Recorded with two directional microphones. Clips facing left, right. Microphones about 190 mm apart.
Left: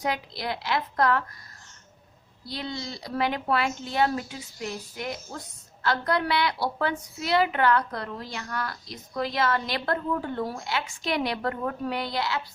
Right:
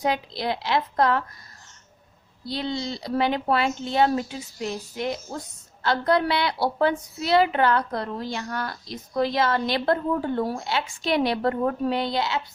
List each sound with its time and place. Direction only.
0.0 s a woman's voice: 25° right (ahead or behind)
2.5 s a woman's voice: 30° right (ahead or behind)